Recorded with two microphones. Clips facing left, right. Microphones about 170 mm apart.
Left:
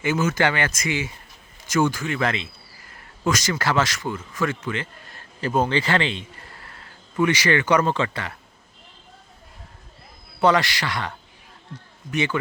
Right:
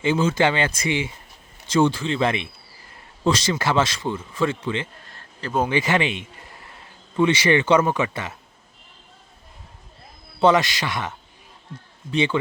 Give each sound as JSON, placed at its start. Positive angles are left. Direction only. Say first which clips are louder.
{"t": 0.0, "sound": "speech", "louder": "right 2 dB", "side_deg": -25}
{"t": 5.4, "sound": "speech", "louder": "left 2 dB", "side_deg": 10}
{"t": 5.6, "sound": "speech", "louder": "right 1 dB", "side_deg": -15}
{"t": 6.1, "sound": "a sound", "louder": "right 1 dB", "side_deg": -20}
{"t": 7.9, "sound": "speech", "louder": "right 1 dB", "side_deg": -15}
{"t": 10.4, "sound": "speech", "louder": "right 2 dB", "side_deg": -20}
{"t": 12.1, "sound": "speech", "louder": "right 3 dB", "side_deg": -25}